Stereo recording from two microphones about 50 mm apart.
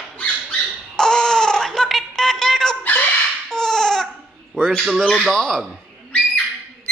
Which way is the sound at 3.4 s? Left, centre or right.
Centre.